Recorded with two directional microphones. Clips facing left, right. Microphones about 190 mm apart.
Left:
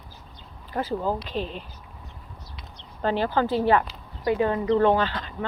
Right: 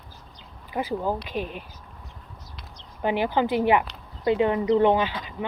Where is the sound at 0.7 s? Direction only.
10° right (ahead or behind).